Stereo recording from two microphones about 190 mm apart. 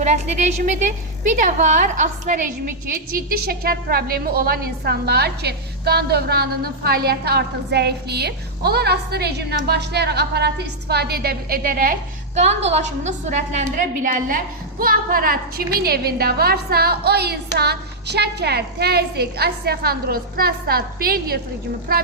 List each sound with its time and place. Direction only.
0.0 s a woman's voice: 35° right (ahead or behind)
3.2 s a woman's voice: 50° right (ahead or behind)
12.6 s a woman's voice: 35° right (ahead or behind); by 22.0 s 50° right (ahead or behind)